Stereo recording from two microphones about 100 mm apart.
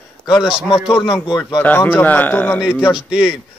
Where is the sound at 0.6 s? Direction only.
5° right (ahead or behind).